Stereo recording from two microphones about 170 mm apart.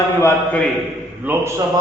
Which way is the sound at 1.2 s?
10° right (ahead or behind).